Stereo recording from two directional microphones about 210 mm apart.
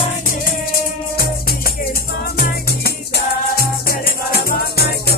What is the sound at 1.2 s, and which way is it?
Music, 45° left (ahead or behind).